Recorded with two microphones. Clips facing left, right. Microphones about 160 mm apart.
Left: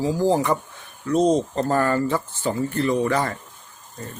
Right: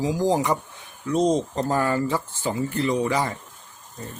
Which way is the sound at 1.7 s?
10° right (ahead or behind).